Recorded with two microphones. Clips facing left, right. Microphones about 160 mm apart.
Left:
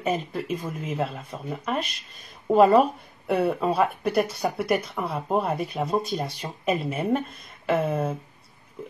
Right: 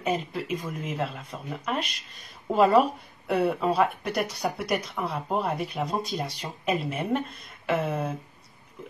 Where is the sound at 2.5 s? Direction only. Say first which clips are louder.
Left 3 dB; centre (ahead or behind).